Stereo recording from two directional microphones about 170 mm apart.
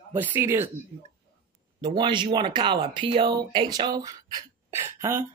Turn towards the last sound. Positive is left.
turn(degrees=-20)  # may be behind; listen again after turning